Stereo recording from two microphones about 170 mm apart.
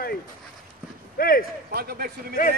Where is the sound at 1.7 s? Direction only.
65° right (ahead or behind).